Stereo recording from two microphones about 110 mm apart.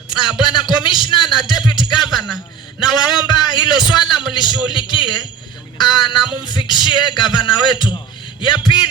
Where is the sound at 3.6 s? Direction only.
45° left (ahead or behind).